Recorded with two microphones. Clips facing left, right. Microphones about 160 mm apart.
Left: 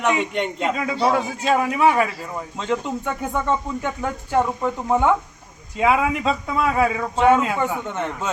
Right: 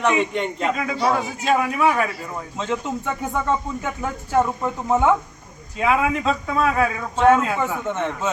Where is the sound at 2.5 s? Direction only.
Centre (ahead or behind).